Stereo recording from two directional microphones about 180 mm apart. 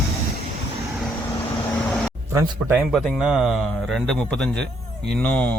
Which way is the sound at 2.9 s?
Centre (ahead or behind).